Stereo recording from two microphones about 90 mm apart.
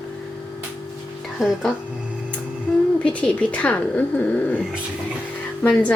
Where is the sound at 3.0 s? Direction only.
10° left (ahead or behind).